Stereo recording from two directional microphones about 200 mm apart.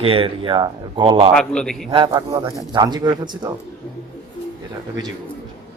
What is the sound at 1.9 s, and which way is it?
Speech, 25° right (ahead or behind).